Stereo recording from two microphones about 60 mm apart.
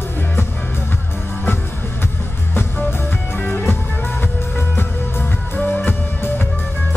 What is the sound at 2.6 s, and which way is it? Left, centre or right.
Music, left.